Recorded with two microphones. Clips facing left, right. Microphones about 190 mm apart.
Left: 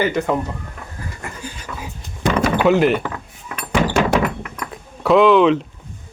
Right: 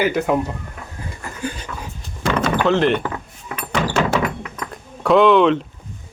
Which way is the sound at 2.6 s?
10° left (ahead or behind).